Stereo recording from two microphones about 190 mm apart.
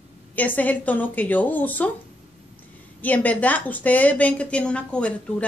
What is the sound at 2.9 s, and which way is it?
A woman's voice, 10° left (ahead or behind).